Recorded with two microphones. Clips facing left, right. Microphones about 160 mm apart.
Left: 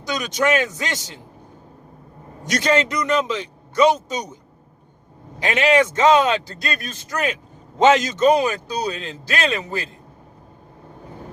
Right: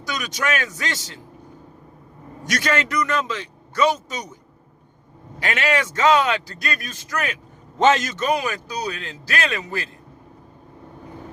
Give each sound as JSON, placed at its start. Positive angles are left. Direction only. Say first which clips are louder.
{"t": 0.0, "sound": "a man's voice", "louder": "left 5 dB", "side_deg": 20}
{"t": 2.5, "sound": "a man's voice", "louder": "left 4 dB", "side_deg": 20}
{"t": 5.4, "sound": "a man's voice", "louder": "left 6 dB", "side_deg": 20}